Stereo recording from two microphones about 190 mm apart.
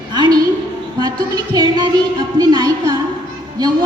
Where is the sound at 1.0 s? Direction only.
20° right (ahead or behind).